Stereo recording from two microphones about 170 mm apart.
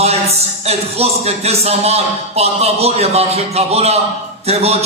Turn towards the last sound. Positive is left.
turn(degrees=-35)  # may be behind; listen again after turning